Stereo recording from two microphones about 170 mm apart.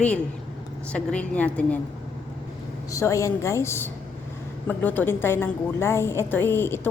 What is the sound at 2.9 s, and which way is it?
A woman's voice, 20° left (ahead or behind).